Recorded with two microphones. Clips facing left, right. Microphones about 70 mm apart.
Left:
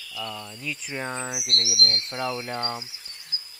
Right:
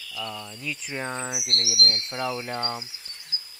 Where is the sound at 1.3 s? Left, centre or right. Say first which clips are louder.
Left 1 dB; right.